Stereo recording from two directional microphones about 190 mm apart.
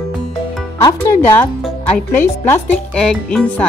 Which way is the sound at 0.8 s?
15° left (ahead or behind).